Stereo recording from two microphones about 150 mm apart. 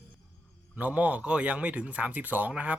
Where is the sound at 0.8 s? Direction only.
10° right (ahead or behind).